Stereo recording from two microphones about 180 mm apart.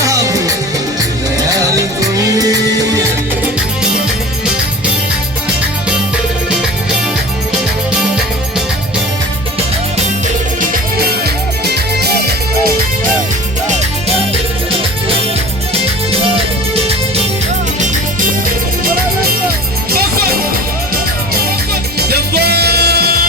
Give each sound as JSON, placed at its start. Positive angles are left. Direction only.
{"t": 0.0, "sound": "music", "side_deg": -20}
{"t": 11.6, "sound": "music", "side_deg": -65}
{"t": 22.1, "sound": "music", "side_deg": -65}